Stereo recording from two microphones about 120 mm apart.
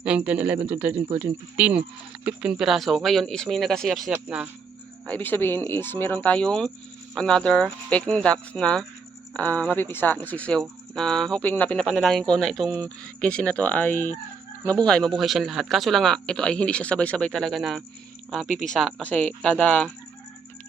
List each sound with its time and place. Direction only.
0.0 s speech: 10° right (ahead or behind)
1.5 s speech: 10° right (ahead or behind)
4.1 s speech: 15° right (ahead or behind)
5.0 s speech: 15° left (ahead or behind)